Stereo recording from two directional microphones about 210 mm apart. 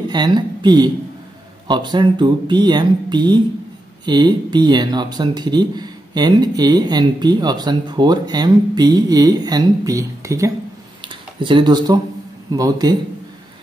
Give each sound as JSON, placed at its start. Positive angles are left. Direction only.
{"t": 0.1, "sound": "speech", "side_deg": -20}
{"t": 11.0, "sound": "a sound", "side_deg": -25}
{"t": 12.4, "sound": "speech", "side_deg": -20}